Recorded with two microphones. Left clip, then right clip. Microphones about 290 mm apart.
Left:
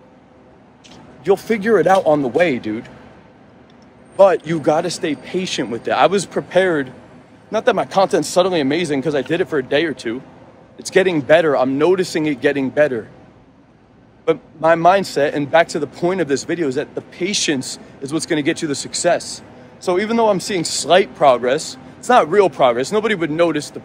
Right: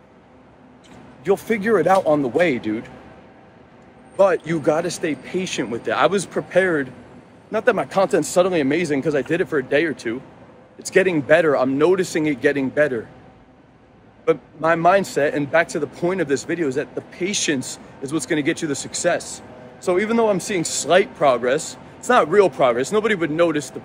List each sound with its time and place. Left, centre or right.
1.2 s a man's voice: centre
4.5 s a man's voice: centre
14.2 s a man's voice: centre